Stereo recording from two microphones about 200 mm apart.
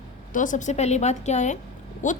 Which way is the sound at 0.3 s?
40° left (ahead or behind).